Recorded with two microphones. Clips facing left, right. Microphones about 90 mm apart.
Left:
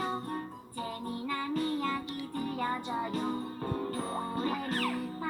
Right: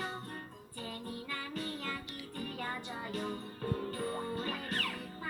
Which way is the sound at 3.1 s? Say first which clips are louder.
Left 5 dB; 35° left (ahead or behind).